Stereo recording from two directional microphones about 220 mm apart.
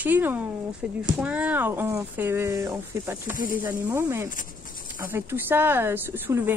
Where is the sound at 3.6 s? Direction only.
10° right (ahead or behind).